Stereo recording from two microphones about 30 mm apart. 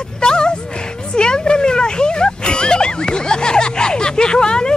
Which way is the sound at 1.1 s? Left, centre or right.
Left.